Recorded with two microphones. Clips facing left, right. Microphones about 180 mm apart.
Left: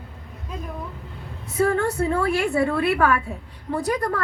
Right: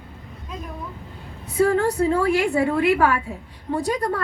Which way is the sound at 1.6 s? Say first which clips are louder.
Right 2 dB; 35° right (ahead or behind).